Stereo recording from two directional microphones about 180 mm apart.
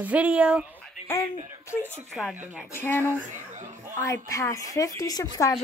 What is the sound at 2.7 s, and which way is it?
Speech, 10° left (ahead or behind).